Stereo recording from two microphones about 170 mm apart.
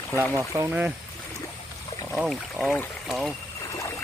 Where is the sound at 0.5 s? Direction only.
10° right (ahead or behind).